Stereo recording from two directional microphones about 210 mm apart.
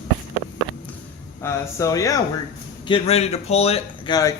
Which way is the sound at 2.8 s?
25° left (ahead or behind).